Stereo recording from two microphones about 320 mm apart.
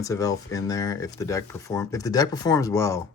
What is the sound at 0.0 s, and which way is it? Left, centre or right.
Speech, centre.